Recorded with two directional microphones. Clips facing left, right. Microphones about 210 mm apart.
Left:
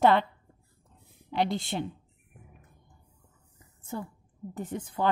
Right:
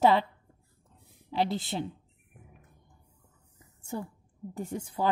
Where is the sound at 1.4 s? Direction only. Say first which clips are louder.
Left 1 dB; 5° right (ahead or behind).